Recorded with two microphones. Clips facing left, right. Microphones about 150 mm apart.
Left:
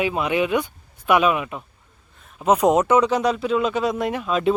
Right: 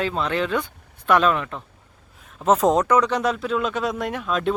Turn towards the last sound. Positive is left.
turn(degrees=5)  # may be behind; listen again after turning